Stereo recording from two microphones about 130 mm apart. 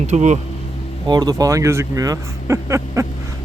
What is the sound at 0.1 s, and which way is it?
Speech, 65° right (ahead or behind).